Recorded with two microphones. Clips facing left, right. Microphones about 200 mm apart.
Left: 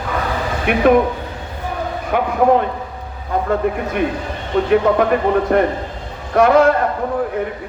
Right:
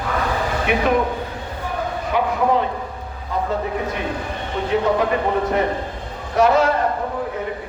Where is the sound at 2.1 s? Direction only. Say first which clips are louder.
Left 5 dB; 55° left (ahead or behind).